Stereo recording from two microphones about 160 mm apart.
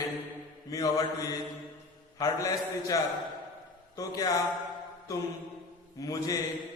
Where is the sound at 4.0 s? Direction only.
20° left (ahead or behind).